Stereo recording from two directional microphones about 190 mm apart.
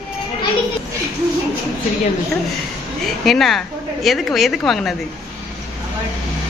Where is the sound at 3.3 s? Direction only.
Centre (ahead or behind).